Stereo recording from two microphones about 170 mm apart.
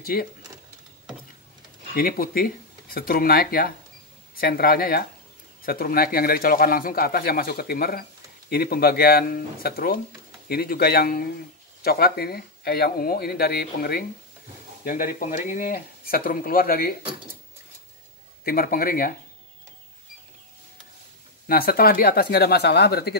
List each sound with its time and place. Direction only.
0.0 s speech: 60° left (ahead or behind)
2.0 s speech: 60° left (ahead or behind)
14.9 s speech: 55° left (ahead or behind)
18.4 s speech: 60° left (ahead or behind)
21.5 s speech: 60° left (ahead or behind)